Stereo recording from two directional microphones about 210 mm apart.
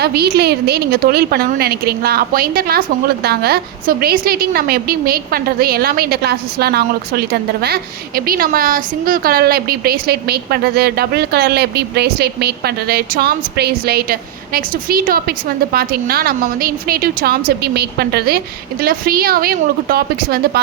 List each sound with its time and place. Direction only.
0.0 s a woman's voice: 50° right (ahead or behind)